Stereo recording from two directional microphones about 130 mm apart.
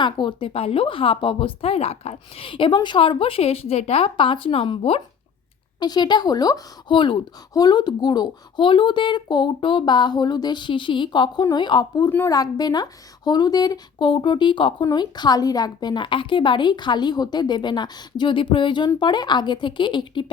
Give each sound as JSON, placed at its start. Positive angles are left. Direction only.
{"t": 0.0, "sound": "speech", "side_deg": 35}
{"t": 5.8, "sound": "speech", "side_deg": 35}